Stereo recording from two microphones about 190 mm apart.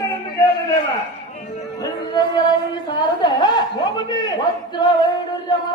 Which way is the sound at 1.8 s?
25° left (ahead or behind).